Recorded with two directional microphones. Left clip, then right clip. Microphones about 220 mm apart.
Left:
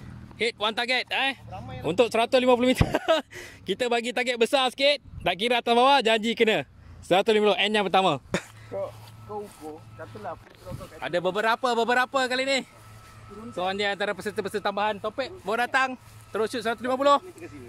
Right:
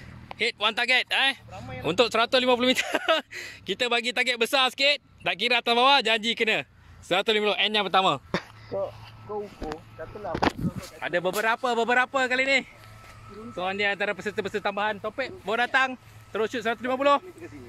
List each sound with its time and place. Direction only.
0.4 s speech: 5° left (ahead or behind); by 8.2 s 25° left (ahead or behind)
8.7 s speech: 30° right (ahead or behind)
11.0 s speech: 10° left (ahead or behind)